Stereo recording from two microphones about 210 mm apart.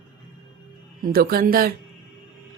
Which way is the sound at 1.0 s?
45° right (ahead or behind).